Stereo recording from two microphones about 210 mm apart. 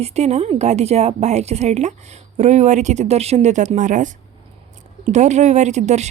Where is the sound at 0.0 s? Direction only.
30° right (ahead or behind).